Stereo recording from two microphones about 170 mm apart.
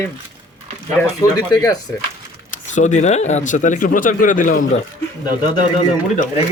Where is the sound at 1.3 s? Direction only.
20° left (ahead or behind).